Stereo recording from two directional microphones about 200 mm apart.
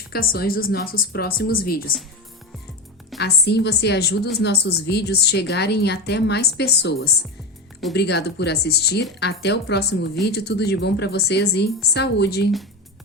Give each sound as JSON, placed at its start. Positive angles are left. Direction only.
{"t": 0.1, "sound": "speech", "side_deg": 50}
{"t": 3.2, "sound": "a woman's voice", "side_deg": 55}
{"t": 7.9, "sound": "a woman's voice", "side_deg": 55}